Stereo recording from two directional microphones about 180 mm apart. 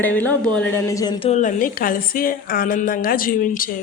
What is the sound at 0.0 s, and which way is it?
Speech, 10° left (ahead or behind).